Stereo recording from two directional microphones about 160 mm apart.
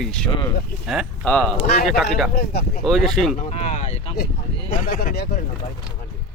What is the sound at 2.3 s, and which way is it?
Speech, 70° left (ahead or behind).